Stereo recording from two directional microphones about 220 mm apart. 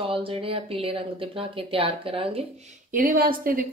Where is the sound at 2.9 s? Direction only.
40° right (ahead or behind).